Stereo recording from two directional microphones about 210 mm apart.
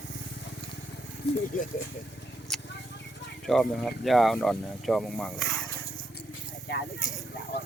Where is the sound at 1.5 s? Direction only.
40° left (ahead or behind).